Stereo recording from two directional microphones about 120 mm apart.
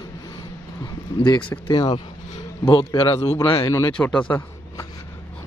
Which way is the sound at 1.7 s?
45° left (ahead or behind).